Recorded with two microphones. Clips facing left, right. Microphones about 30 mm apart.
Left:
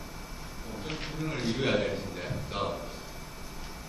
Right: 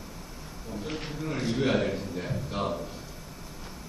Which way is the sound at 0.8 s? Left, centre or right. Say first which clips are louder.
Right 1 dB; centre.